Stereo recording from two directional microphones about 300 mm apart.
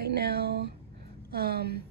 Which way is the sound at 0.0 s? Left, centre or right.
Right.